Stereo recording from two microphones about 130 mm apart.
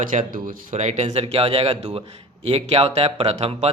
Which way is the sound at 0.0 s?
90° right.